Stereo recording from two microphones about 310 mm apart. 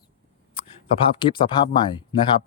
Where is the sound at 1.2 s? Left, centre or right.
Centre.